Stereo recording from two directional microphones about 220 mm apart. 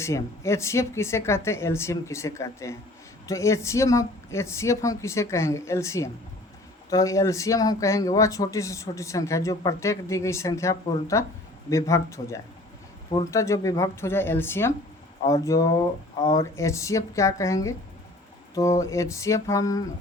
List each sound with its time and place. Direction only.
0.0 s speech: 15° left (ahead or behind)